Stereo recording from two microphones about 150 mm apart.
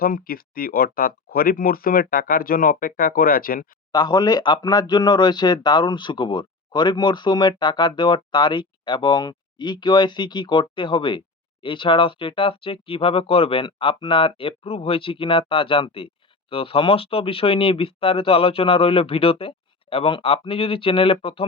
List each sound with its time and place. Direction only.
0.0 s speech: 75° left (ahead or behind)
3.9 s speech: 30° left (ahead or behind)